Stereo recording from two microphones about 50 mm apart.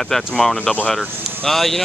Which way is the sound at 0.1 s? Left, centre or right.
Centre.